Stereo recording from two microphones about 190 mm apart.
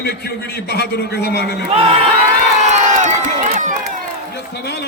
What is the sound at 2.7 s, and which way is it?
Crowd, 40° right (ahead or behind).